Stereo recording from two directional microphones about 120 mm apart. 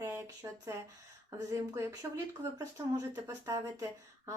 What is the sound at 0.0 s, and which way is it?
Speech, 25° right (ahead or behind).